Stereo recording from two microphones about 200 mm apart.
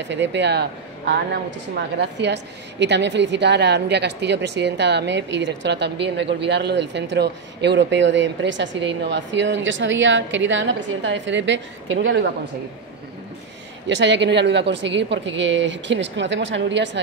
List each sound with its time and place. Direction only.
0.1 s a woman's voice: 60° right (ahead or behind)
13.8 s a woman's voice: 65° right (ahead or behind)